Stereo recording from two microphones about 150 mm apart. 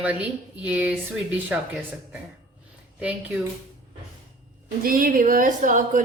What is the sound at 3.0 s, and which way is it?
Speech, 10° right (ahead or behind).